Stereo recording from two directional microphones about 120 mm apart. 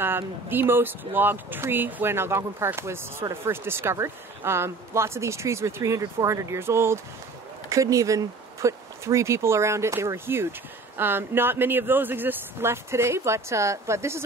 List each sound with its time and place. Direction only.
0.0 s speech: 20° right (ahead or behind)